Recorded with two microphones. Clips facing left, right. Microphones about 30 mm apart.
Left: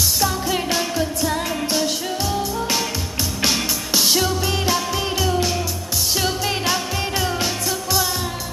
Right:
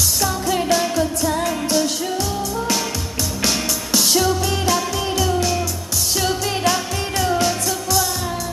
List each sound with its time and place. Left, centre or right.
0.2 s music of asia: centre
3.4 s music: centre
6.1 s music of asia: centre
7.2 s music: centre